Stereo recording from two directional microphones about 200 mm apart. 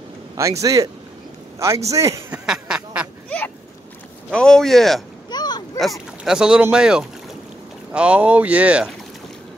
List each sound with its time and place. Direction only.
0.4 s speech: 15° right (ahead or behind)
1.9 s speech: 15° right (ahead or behind)
2.4 s duck: 5° right (ahead or behind)
3.3 s a sound: 5° left (ahead or behind)
4.3 s speech: 5° left (ahead or behind)
5.3 s a sound: 20° left (ahead or behind)
5.8 s speech: centre (ahead or behind)